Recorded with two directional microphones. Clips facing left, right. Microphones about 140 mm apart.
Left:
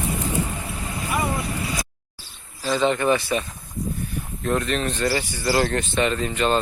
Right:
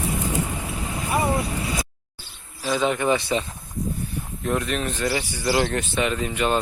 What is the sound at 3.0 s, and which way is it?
Speech, 20° right (ahead or behind).